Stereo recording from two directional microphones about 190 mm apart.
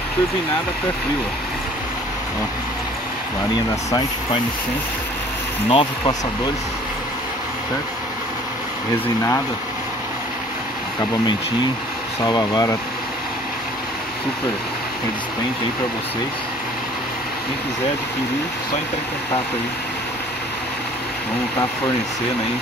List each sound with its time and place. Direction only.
5.7 s speech: 25° left (ahead or behind)
12.2 s speech: 20° left (ahead or behind)